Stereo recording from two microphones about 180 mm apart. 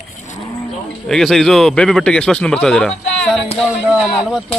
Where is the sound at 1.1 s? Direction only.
Centre (ahead or behind).